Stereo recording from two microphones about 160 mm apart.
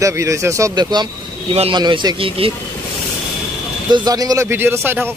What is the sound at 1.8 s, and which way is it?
Speech, 25° right (ahead or behind).